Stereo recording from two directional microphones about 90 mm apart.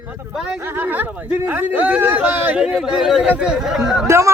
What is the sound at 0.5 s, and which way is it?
Speech, 25° right (ahead or behind).